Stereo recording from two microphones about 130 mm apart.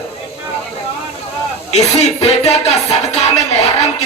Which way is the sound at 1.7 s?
55° left (ahead or behind).